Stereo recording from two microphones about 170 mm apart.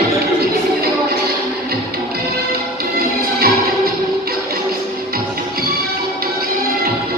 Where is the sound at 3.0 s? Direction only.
60° right (ahead or behind).